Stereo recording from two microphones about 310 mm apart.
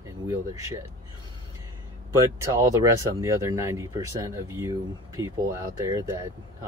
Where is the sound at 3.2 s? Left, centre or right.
Centre.